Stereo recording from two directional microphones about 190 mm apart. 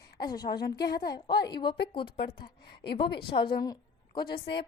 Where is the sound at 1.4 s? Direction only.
25° left (ahead or behind).